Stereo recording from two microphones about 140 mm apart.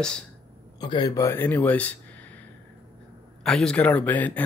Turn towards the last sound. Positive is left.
turn(degrees=10)  # may be behind; listen again after turning